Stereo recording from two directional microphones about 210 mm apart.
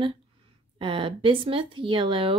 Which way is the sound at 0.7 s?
25° right (ahead or behind).